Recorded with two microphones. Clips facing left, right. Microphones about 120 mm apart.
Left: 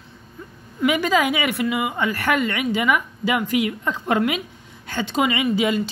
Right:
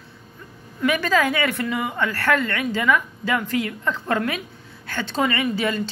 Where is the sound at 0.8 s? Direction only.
15° left (ahead or behind).